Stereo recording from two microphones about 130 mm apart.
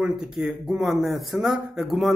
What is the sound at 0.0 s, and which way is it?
Speech, centre (ahead or behind).